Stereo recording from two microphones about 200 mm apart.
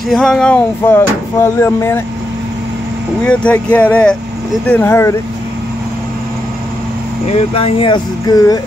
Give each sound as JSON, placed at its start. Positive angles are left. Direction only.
{"t": 0.1, "sound": "speech", "side_deg": 0}
{"t": 3.3, "sound": "speech", "side_deg": 5}
{"t": 7.2, "sound": "speech", "side_deg": 30}